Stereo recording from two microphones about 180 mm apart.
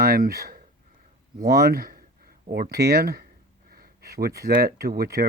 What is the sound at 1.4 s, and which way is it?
Speech, 60° right (ahead or behind).